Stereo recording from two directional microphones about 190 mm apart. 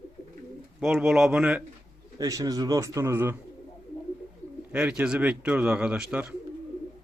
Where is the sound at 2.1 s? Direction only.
20° right (ahead or behind).